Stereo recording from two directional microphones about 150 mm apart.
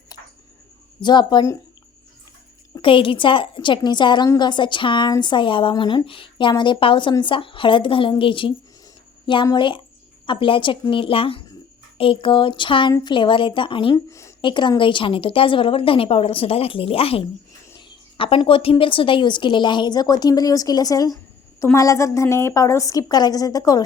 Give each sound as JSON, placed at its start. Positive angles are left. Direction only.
{"t": 1.0, "sound": "a woman's voice", "side_deg": 30}
{"t": 2.7, "sound": "speech", "side_deg": 35}
{"t": 13.9, "sound": "a woman's voice", "side_deg": 20}
{"t": 14.4, "sound": "a woman's voice", "side_deg": 30}